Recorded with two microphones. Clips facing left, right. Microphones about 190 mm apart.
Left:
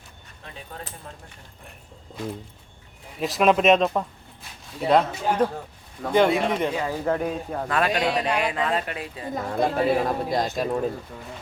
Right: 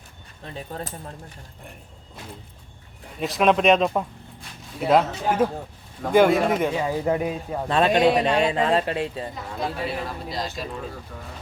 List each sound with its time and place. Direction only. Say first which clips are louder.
0.4 s speech: right 6 dB; 35° right (ahead or behind)
3.2 s speech: even; centre (ahead or behind)
7.7 s speech: right 6 dB; 25° right (ahead or behind)
9.3 s speech: left 6 dB; 50° left (ahead or behind)